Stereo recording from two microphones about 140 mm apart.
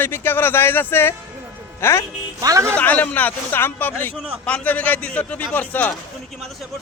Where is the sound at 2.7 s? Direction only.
10° left (ahead or behind).